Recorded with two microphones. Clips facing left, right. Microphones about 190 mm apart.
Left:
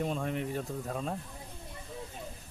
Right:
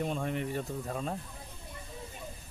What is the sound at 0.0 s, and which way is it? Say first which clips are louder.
Speech: even; centre (ahead or behind).